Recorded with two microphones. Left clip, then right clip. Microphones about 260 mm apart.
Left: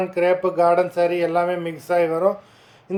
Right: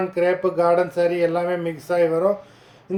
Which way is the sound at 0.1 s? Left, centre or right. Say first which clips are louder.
Left 1 dB; centre.